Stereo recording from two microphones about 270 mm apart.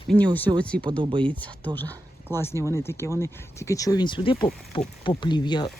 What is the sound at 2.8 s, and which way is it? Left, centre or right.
Speech, centre.